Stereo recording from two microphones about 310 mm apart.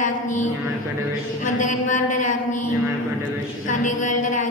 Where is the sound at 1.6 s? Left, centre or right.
Left.